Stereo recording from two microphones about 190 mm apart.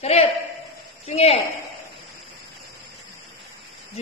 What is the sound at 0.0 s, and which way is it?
A man's voice, 30° left (ahead or behind).